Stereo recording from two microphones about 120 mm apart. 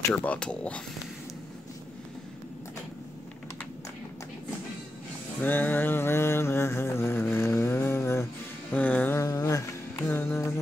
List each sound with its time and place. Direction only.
0.1 s speech: 10° left (ahead or behind)
5.4 s mantra: 15° left (ahead or behind)
8.7 s music: 15° left (ahead or behind)
9.2 s a sound: 30° left (ahead or behind)